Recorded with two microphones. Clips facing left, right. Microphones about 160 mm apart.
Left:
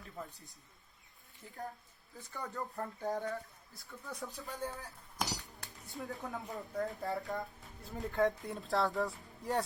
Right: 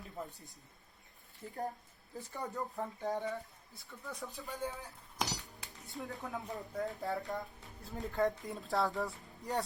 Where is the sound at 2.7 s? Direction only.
Centre (ahead or behind).